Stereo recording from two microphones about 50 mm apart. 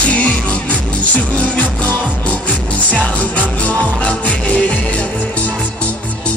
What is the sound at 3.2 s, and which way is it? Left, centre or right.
Music, left.